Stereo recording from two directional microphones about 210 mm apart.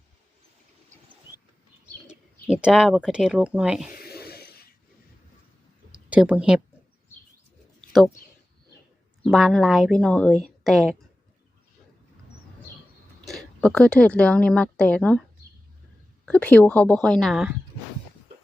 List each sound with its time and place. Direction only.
2.0 s speech: 5° right (ahead or behind)
3.9 s cough: 45° left (ahead or behind)
6.1 s speech: 5° right (ahead or behind)
7.8 s a sound: centre (ahead or behind)
9.2 s a woman's voice: centre (ahead or behind)
13.2 s speech: centre (ahead or behind)
16.2 s a woman's voice: 5° left (ahead or behind)